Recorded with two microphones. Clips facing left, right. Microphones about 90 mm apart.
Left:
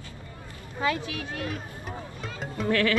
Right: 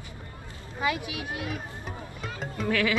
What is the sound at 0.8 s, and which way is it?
Bleat, 15° right (ahead or behind).